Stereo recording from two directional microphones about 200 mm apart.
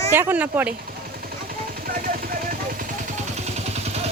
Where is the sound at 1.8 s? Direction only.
45° right (ahead or behind).